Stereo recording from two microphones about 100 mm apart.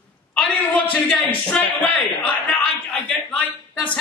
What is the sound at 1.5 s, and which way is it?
A man's voice, 15° left (ahead or behind).